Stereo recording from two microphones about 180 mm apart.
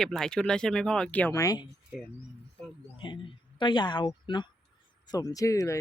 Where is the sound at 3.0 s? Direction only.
25° left (ahead or behind).